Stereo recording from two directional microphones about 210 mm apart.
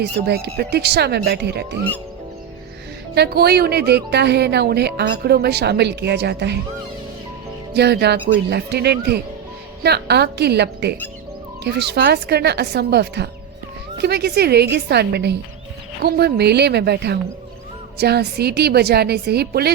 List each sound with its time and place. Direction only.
0.0 s a woman's voice: 50° right (ahead or behind)
3.2 s a woman's voice: 50° right (ahead or behind)
7.7 s a woman's voice: 50° right (ahead or behind)